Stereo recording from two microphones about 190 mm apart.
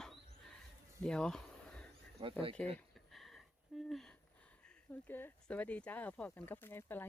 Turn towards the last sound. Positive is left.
turn(degrees=10)  # may be behind; listen again after turning